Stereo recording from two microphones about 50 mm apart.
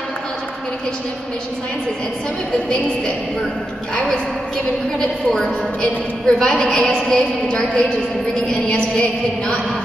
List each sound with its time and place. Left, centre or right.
4.9 s a woman's voice: centre
8.5 s music: centre